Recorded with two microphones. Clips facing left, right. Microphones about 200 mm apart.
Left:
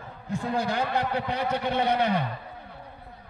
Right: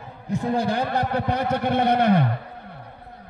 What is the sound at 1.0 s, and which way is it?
A man's voice, 45° right (ahead or behind).